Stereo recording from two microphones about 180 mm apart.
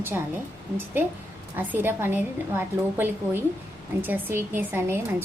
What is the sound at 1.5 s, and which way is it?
A woman's voice, 10° right (ahead or behind).